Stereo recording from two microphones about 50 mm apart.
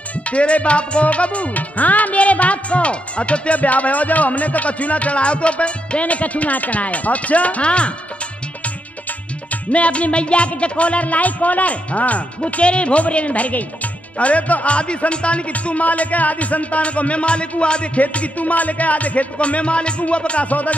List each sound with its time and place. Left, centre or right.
0.3 s music: left
9.7 s music: left